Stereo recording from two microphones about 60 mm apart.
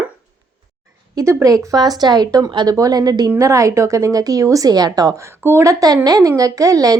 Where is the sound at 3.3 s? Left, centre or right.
Right.